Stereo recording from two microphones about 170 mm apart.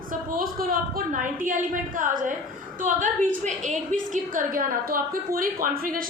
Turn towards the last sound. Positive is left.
turn(degrees=-55)  # may be behind; listen again after turning